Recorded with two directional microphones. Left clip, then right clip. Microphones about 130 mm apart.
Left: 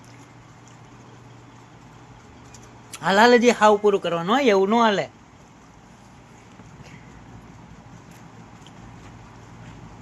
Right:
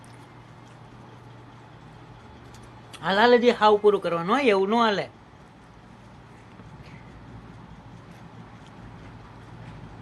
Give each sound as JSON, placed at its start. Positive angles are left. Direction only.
{"t": 2.9, "sound": "speech", "side_deg": 90}
{"t": 3.8, "sound": "speech", "side_deg": 45}